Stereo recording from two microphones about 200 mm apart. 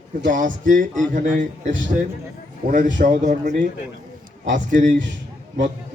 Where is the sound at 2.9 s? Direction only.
40° right (ahead or behind).